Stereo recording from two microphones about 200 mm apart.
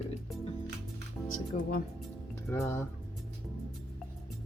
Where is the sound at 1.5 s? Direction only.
35° left (ahead or behind).